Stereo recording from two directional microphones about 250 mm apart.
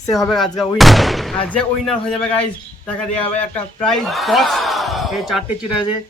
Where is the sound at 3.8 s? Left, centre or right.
Centre.